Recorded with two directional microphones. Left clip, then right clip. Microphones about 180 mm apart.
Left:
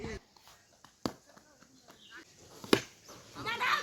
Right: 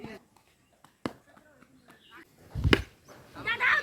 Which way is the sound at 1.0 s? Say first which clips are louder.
Right 1 dB; 15° left (ahead or behind).